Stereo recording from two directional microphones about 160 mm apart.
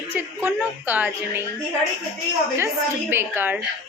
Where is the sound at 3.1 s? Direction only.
15° right (ahead or behind).